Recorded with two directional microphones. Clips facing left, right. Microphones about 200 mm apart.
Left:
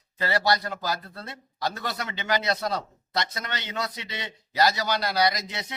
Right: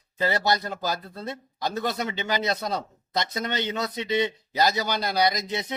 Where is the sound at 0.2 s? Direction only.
20° right (ahead or behind).